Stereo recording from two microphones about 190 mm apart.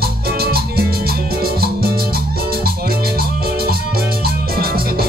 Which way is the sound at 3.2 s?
55° right (ahead or behind).